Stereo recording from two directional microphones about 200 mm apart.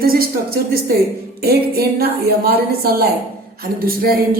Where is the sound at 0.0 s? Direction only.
50° right (ahead or behind).